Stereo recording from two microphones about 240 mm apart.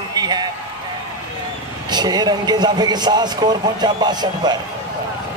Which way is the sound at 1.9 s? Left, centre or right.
Centre.